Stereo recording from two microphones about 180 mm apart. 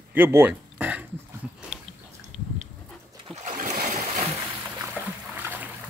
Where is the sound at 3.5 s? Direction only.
45° right (ahead or behind).